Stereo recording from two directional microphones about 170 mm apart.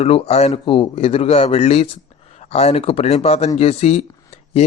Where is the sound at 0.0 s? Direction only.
40° left (ahead or behind).